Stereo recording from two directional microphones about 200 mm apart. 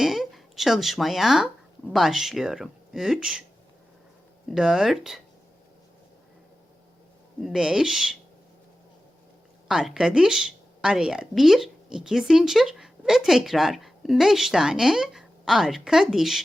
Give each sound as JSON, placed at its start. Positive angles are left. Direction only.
{"t": 0.0, "sound": "speech", "side_deg": 0}
{"t": 4.4, "sound": "speech", "side_deg": 0}
{"t": 7.4, "sound": "speech", "side_deg": -5}
{"t": 9.6, "sound": "speech", "side_deg": 0}